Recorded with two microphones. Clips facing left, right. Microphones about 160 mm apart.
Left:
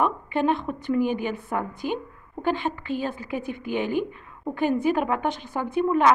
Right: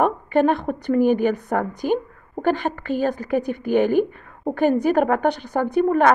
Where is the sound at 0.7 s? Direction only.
45° right (ahead or behind).